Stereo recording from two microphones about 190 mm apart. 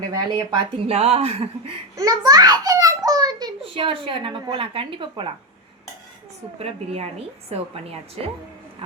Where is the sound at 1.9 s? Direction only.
20° right (ahead or behind).